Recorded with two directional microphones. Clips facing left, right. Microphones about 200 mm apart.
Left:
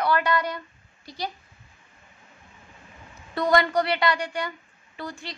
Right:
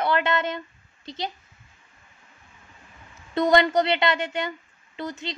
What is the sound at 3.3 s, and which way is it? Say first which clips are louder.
A woman's voice: right 3 dB; 20° right (ahead or behind).